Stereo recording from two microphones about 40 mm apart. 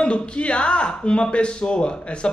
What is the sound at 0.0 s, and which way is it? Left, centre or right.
Speech, left.